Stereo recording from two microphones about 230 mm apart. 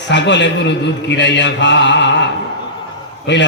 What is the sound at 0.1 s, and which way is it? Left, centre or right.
A man's voice, left.